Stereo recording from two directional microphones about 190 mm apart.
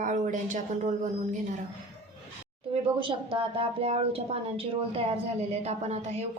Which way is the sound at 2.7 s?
25° right (ahead or behind).